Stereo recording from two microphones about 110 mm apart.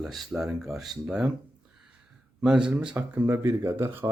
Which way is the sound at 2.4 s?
5° right (ahead or behind).